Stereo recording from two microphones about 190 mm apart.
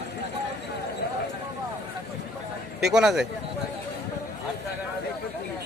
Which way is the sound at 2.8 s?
Centre (ahead or behind).